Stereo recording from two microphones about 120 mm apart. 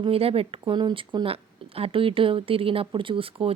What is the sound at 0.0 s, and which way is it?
Speech, 55° right (ahead or behind).